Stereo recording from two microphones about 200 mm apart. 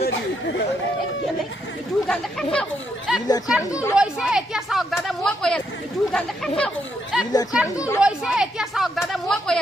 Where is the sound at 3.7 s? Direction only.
15° left (ahead or behind).